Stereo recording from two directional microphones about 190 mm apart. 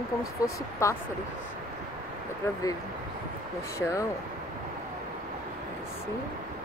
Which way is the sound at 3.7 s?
15° left (ahead or behind).